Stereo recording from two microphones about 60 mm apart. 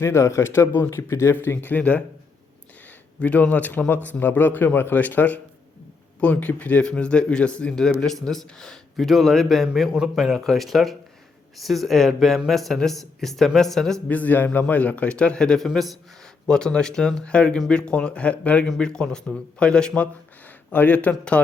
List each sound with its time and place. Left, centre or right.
0.0 s speech: left
1.6 s a man's voice: left
3.2 s a man's voice: left
6.8 s speech: centre
14.1 s a man's voice: left; by 20.1 s centre
20.7 s a man's voice: left